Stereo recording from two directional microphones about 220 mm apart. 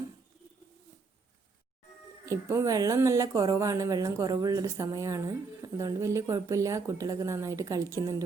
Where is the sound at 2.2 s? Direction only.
15° right (ahead or behind).